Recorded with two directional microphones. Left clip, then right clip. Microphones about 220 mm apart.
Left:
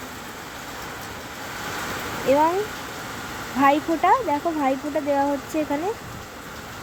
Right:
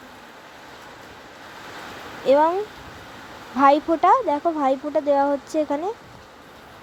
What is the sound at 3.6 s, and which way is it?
Speech, 20° right (ahead or behind).